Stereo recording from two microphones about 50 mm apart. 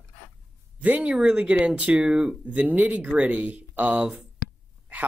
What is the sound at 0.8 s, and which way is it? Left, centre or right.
Speech, right.